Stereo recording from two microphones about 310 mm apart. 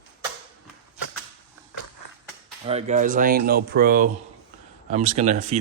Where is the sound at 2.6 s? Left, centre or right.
Right.